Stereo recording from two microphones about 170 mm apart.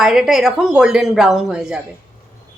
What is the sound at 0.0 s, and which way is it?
Speech, 5° right (ahead or behind).